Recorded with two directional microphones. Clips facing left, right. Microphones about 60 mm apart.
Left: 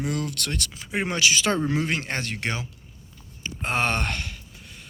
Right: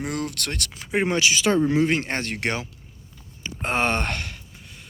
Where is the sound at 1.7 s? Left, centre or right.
Right.